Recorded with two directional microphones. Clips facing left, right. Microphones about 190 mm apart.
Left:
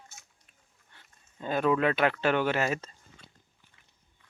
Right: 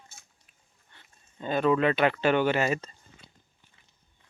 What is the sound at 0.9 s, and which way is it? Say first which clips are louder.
Speech: right 1 dB; 5° left (ahead or behind).